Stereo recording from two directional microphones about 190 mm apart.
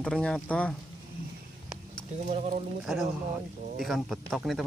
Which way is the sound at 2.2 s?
35° right (ahead or behind).